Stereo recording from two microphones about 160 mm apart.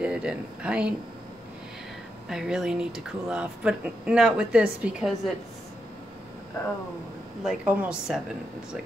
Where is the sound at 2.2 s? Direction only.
5° right (ahead or behind).